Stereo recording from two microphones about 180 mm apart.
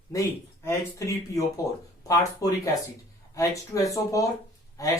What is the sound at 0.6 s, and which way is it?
Speech, 15° left (ahead or behind).